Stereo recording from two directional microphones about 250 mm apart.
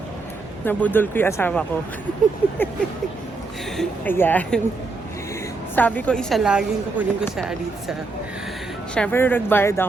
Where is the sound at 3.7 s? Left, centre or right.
Centre.